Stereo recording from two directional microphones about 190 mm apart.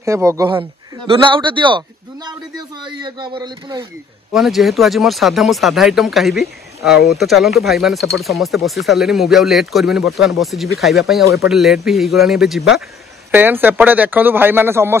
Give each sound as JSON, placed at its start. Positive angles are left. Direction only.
{"t": 0.0, "sound": "speech", "side_deg": -15}
{"t": 4.3, "sound": "speech", "side_deg": 0}